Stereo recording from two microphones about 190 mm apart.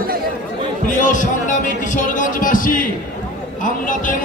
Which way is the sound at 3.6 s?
45° left (ahead or behind).